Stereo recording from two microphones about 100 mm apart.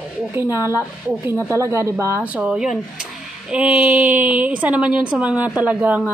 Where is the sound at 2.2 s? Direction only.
10° right (ahead or behind).